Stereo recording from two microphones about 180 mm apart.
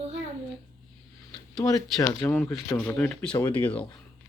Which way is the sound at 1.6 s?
20° left (ahead or behind).